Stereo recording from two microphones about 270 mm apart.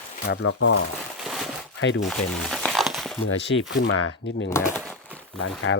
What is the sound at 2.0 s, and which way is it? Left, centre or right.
Crumpling, centre.